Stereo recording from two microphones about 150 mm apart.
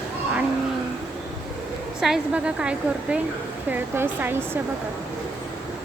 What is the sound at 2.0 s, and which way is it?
A woman's voice, 5° right (ahead or behind).